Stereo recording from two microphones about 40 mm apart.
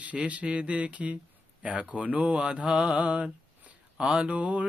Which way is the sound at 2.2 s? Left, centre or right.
Right.